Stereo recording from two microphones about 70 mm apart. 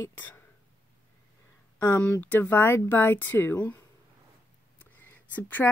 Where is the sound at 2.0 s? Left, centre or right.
Left.